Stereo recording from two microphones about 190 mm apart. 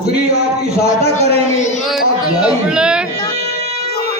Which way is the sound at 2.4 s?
5° right (ahead or behind).